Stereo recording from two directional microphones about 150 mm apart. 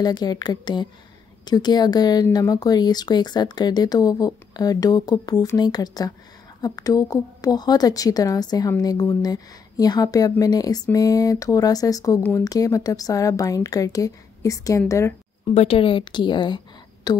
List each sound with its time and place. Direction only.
0.0 s speech: 25° left (ahead or behind)
15.4 s a woman's voice: 40° left (ahead or behind)